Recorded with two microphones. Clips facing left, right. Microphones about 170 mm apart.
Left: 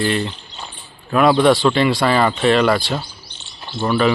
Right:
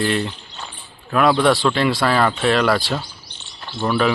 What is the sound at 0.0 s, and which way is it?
Speech, centre (ahead or behind).